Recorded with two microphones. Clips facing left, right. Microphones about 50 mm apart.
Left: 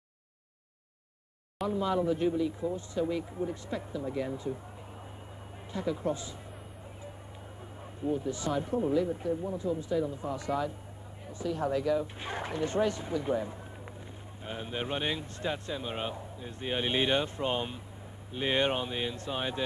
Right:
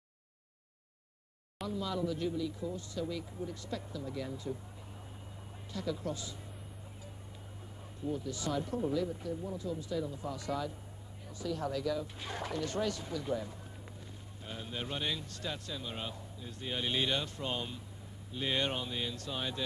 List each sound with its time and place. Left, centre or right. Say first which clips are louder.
1.7 s a man's voice: left 7 dB; left
5.7 s a man's voice: left 6 dB; left
8.0 s a man's voice: left 5 dB; left